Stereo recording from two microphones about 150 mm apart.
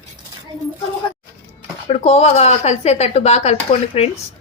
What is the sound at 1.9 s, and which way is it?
A woman's voice, 45° left (ahead or behind).